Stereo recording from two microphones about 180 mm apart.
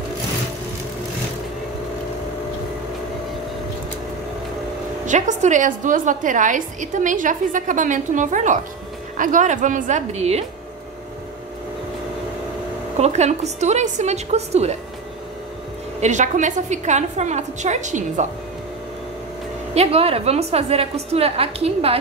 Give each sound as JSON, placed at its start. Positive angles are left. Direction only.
{"t": 5.0, "sound": "a woman's voice", "side_deg": -45}
{"t": 12.9, "sound": "a woman's voice", "side_deg": -40}
{"t": 16.0, "sound": "a woman's voice", "side_deg": -40}
{"t": 19.7, "sound": "a woman's voice", "side_deg": -35}